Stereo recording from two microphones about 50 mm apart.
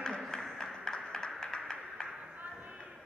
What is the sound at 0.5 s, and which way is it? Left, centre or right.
Music, centre.